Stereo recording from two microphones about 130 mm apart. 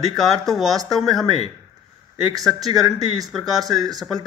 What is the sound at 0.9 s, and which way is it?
Speech, centre (ahead or behind).